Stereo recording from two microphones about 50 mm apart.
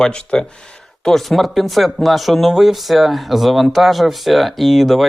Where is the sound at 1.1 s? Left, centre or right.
Centre.